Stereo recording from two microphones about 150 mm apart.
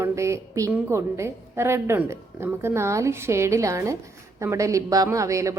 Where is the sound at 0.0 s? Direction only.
20° right (ahead or behind).